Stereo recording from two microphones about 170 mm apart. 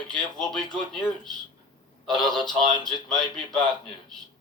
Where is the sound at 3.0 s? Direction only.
5° left (ahead or behind).